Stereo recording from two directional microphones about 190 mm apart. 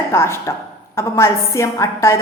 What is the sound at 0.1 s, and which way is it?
A woman's voice, 15° left (ahead or behind).